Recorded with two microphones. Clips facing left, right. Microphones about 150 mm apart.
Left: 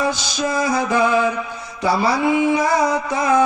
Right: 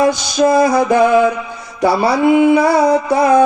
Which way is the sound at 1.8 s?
15° right (ahead or behind).